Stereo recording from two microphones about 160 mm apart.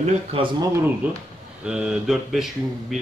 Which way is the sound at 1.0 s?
10° right (ahead or behind).